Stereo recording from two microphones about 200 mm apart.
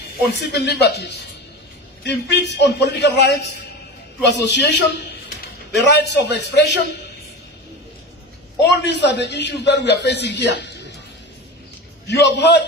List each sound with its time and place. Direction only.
0.3 s a man's voice: 55° left (ahead or behind)
8.5 s a man's voice: 60° left (ahead or behind)
12.2 s a man's voice: 60° left (ahead or behind)